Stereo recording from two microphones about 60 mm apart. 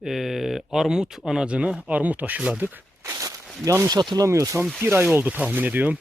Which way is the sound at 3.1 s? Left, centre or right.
Right.